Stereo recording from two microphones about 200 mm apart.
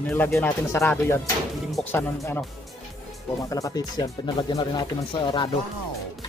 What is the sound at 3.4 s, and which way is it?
Speech, 15° left (ahead or behind).